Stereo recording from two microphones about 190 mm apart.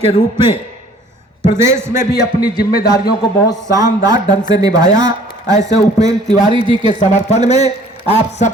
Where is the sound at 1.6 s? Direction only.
15° right (ahead or behind).